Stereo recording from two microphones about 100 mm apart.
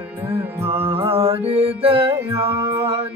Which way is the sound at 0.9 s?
70° right (ahead or behind).